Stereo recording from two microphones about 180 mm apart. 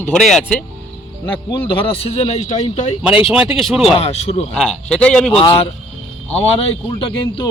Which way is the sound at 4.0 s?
35° left (ahead or behind).